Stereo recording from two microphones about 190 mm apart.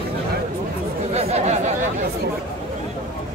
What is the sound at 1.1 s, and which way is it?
Chatter, 35° right (ahead or behind).